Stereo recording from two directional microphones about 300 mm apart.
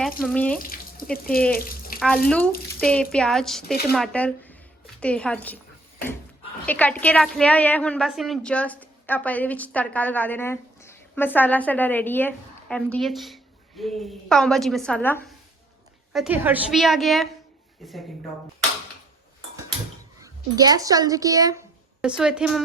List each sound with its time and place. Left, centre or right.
0.0 s a woman's voice: centre
0.6 s water tap: left
1.1 s speech: left
2.0 s a woman's voice: centre
6.7 s a woman's voice: centre
20.2 s a woman's voice: centre